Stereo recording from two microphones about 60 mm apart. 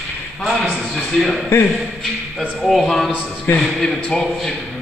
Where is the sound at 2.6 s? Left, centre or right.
Centre.